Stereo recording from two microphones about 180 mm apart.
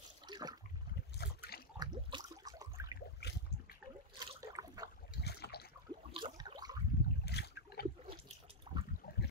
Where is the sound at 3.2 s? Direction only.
70° left (ahead or behind).